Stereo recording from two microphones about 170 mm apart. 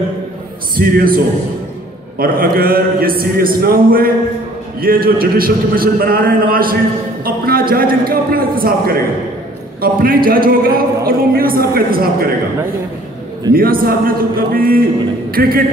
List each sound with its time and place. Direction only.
0.7 s a man's voice: 60° right (ahead or behind)
13.5 s a man's voice: 60° right (ahead or behind)